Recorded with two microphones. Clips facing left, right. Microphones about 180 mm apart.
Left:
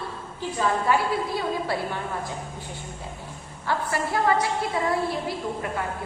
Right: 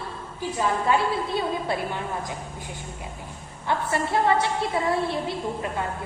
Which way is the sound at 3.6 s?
25° right (ahead or behind).